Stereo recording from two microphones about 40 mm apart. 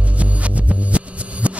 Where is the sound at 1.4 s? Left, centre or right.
Right.